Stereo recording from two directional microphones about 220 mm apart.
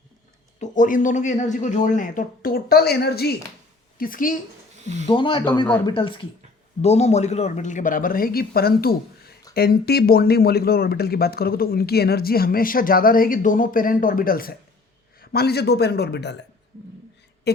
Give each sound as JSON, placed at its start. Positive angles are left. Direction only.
{"t": 0.6, "sound": "a woman's voice", "side_deg": 35}
{"t": 5.0, "sound": "speech", "side_deg": 20}